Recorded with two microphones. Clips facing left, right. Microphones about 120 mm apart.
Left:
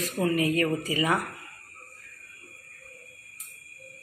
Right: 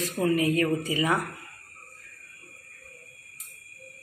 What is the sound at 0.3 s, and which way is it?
Speech, 25° right (ahead or behind).